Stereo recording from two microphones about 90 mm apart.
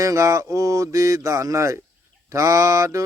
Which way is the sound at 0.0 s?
35° right (ahead or behind).